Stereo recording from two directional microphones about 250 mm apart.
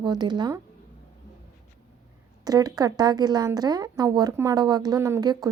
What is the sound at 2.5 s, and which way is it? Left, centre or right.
A woman's voice, centre.